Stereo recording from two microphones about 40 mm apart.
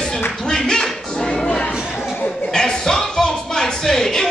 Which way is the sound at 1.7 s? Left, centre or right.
Centre.